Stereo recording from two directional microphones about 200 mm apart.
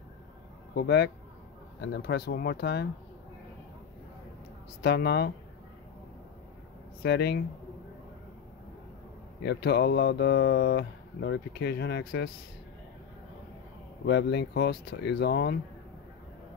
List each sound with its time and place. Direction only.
0.7 s speech: 55° left (ahead or behind)
4.8 s speech: 55° left (ahead or behind)
7.0 s speech: 55° left (ahead or behind)
9.4 s speech: 55° left (ahead or behind)
14.0 s speech: 55° left (ahead or behind)